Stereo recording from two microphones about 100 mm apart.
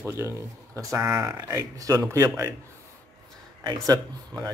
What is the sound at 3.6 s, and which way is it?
Speech, 45° right (ahead or behind).